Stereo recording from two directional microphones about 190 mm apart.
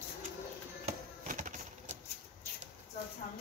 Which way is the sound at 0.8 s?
40° right (ahead or behind).